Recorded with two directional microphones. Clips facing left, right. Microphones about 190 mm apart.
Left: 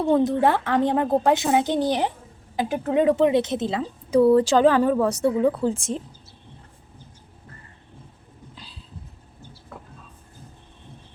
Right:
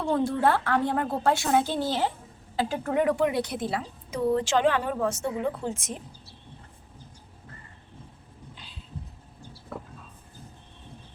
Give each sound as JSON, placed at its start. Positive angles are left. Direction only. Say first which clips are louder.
{"t": 0.0, "sound": "a woman's voice", "louder": "left 5 dB", "side_deg": 20}
{"t": 4.4, "sound": "a woman's voice", "louder": "left 7 dB", "side_deg": 35}